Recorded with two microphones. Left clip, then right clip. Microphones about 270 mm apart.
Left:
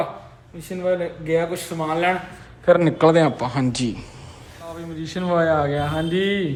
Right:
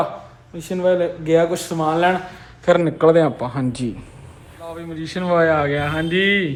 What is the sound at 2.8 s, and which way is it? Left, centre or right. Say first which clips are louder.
Speech: right 1 dB; centre.